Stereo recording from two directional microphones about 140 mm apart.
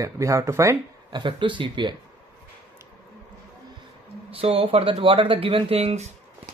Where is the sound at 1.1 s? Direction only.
35° right (ahead or behind).